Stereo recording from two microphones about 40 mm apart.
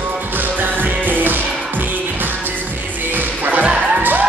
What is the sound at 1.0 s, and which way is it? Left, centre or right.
Music, right.